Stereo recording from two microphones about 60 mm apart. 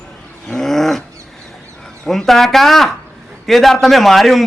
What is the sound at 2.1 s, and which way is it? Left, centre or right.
A man's voice, centre.